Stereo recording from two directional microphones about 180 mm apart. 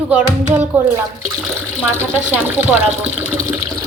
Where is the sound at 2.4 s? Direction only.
10° right (ahead or behind).